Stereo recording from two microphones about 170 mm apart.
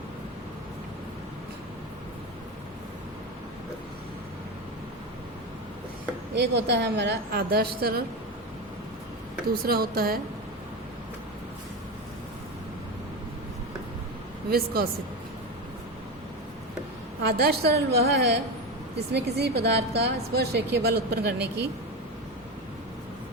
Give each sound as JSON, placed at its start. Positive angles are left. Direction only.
{"t": 6.3, "sound": "a woman's voice", "side_deg": -85}
{"t": 9.6, "sound": "speech", "side_deg": -60}
{"t": 14.5, "sound": "speech", "side_deg": -65}
{"t": 17.2, "sound": "a woman's voice", "side_deg": -70}